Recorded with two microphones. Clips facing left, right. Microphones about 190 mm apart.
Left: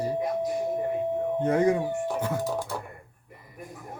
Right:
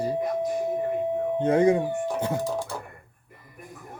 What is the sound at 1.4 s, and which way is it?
Speech, 25° right (ahead or behind).